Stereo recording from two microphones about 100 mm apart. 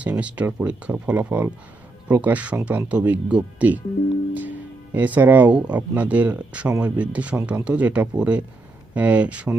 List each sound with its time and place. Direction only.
0.0 s speech: 15° right (ahead or behind)